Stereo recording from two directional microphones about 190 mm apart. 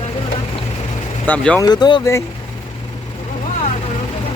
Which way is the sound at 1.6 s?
20° left (ahead or behind).